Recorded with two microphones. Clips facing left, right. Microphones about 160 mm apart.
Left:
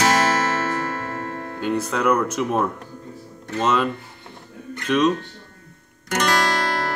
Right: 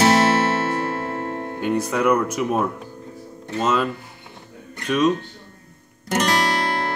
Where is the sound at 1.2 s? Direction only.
30° right (ahead or behind).